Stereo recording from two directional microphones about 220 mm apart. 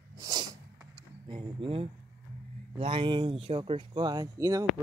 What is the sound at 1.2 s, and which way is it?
Speech, 20° right (ahead or behind).